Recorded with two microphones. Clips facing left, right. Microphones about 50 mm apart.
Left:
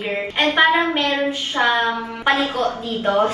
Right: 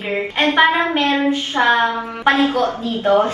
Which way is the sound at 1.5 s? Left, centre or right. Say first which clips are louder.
Right 2 dB; right.